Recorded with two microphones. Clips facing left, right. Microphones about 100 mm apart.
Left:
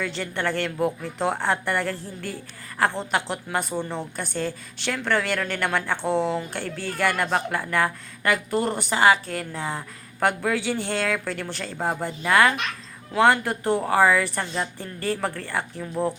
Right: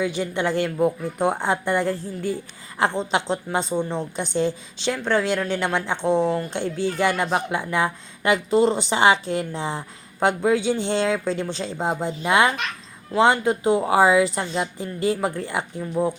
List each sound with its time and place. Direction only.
0.0 s a woman's voice: 15° right (ahead or behind)
15.8 s speech: 5° right (ahead or behind)